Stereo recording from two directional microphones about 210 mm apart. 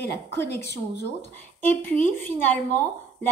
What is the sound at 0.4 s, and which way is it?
Speech, 10° left (ahead or behind).